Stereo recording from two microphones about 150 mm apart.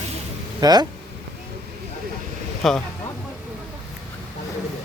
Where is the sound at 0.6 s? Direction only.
25° right (ahead or behind).